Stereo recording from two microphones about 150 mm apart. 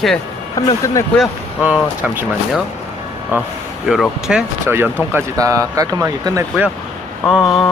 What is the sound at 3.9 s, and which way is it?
Speech, 5° right (ahead or behind).